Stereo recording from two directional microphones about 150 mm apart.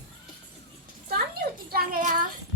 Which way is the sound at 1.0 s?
90° right.